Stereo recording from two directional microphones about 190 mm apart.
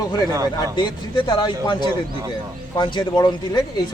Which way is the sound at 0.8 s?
25° left (ahead or behind).